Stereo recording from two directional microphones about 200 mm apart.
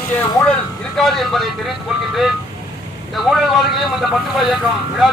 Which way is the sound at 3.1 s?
Centre (ahead or behind).